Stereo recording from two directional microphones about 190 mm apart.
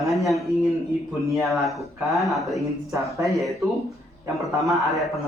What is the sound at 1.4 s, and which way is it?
Speech, centre (ahead or behind).